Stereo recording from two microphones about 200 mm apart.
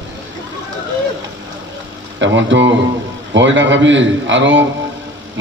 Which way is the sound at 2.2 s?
65° right (ahead or behind).